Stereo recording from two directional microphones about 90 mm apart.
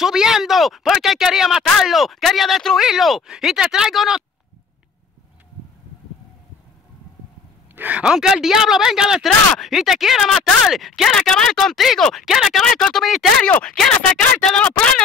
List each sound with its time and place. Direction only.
0.0 s speech: 5° right (ahead or behind)
7.7 s a sound: 20° right (ahead or behind)
8.0 s speech: 5° right (ahead or behind)
13.4 s speech: 15° left (ahead or behind)